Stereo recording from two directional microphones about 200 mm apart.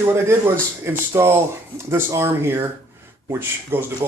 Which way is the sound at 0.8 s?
15° right (ahead or behind).